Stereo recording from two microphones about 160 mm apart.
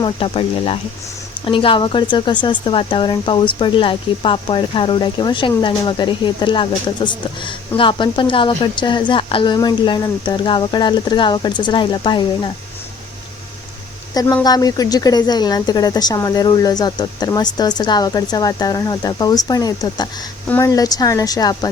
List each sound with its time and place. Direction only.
0.0 s speech: 35° left (ahead or behind)
14.1 s speech: 20° left (ahead or behind)